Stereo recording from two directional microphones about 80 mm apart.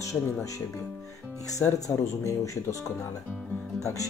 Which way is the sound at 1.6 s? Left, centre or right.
Left.